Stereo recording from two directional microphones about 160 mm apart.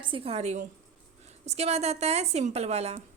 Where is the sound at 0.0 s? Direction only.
35° right (ahead or behind).